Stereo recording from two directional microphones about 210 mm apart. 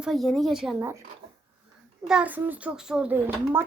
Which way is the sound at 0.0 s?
Centre (ahead or behind).